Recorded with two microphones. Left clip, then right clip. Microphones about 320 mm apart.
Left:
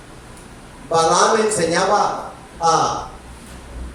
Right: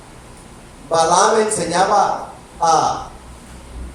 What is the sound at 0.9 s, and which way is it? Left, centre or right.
Speech, centre.